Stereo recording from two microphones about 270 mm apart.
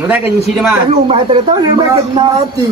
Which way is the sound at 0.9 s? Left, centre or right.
Right.